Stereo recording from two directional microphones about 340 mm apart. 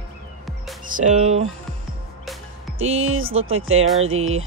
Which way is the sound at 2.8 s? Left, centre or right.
Right.